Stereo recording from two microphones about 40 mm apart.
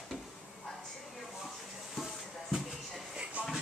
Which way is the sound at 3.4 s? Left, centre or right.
Right.